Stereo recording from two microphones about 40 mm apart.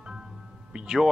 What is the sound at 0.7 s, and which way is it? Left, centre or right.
Speech, centre.